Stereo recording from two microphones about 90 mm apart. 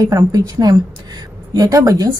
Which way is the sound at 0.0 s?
45° right (ahead or behind).